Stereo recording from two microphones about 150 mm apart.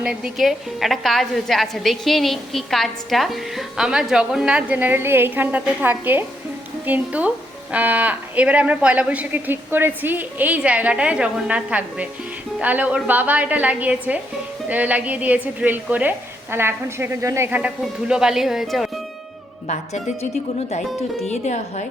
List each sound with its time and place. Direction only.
0.0 s a woman's voice: 5° right (ahead or behind)
18.1 s a woman's voice: 5° right (ahead or behind)
19.6 s a woman's voice: 55° left (ahead or behind)
21.2 s speech: 50° left (ahead or behind)